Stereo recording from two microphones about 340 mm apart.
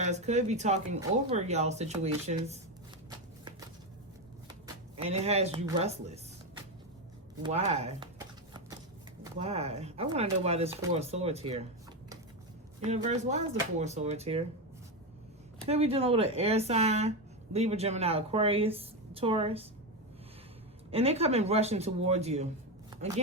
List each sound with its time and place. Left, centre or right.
0.0 s speech: centre
4.4 s speech: centre
7.4 s shuffling cards: centre
9.2 s speech: centre
12.8 s speech: centre
15.6 s speech: centre
20.9 s speech: centre
22.9 s a sound: centre